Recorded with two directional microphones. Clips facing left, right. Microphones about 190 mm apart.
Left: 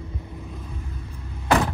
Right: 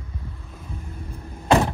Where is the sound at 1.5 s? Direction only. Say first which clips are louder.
Right 2 dB; 20° right (ahead or behind).